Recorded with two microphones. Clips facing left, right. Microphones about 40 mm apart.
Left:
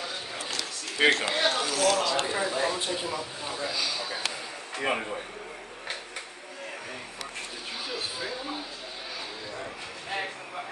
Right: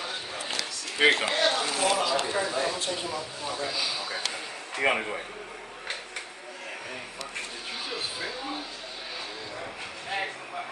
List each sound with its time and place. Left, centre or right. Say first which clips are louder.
1.0 s speech: right 1 dB; centre
1.3 s speech: right 1 dB; centre
1.6 s a man's voice: left 1 dB; right
2.1 s a man's voice: even; centre
3.6 s speech: left 1 dB; centre
4.7 s a man's voice: right 3 dB; right
7.9 s a sound: left 1 dB; centre
9.6 s a sound: right 1 dB; centre